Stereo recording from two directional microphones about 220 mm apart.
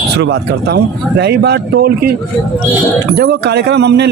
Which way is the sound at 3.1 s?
45° right (ahead or behind).